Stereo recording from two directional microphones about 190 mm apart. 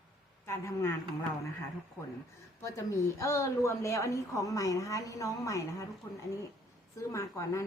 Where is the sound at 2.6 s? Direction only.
15° left (ahead or behind).